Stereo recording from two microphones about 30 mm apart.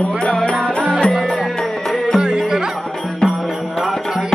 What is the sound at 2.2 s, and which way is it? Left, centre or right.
Music, right.